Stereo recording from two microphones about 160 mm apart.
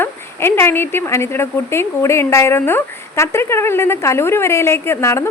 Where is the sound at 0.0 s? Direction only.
15° left (ahead or behind).